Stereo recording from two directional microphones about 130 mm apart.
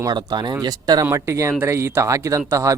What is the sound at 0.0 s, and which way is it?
Speech, 35° right (ahead or behind).